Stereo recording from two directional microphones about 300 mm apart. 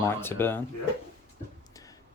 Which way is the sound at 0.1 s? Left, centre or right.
Centre.